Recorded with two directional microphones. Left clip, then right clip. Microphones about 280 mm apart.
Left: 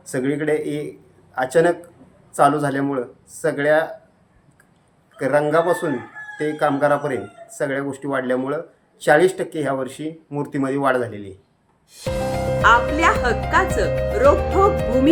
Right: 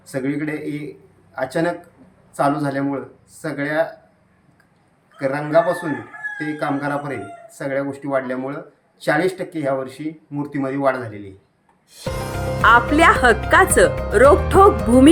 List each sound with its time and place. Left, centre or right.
0.0 s speech: centre
5.2 s speech: centre
11.9 s music: centre
12.6 s speech: right